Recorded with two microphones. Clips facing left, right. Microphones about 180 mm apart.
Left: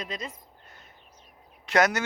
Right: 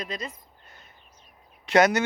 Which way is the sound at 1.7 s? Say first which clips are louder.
Right 4 dB; centre (ahead or behind).